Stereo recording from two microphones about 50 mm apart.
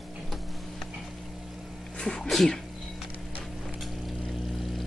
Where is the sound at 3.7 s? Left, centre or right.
Centre.